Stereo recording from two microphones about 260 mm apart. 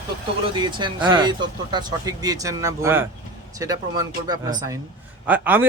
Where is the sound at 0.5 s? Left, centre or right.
Centre.